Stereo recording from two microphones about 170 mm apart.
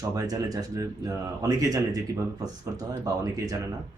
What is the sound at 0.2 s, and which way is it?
Speech, 20° right (ahead or behind).